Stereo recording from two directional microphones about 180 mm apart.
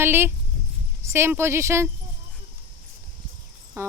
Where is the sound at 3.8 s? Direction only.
15° right (ahead or behind).